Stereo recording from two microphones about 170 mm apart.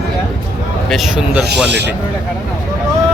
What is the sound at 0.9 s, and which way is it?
Speech, centre (ahead or behind).